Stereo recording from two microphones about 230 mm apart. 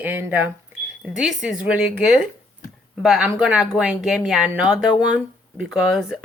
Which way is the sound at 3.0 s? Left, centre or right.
Centre.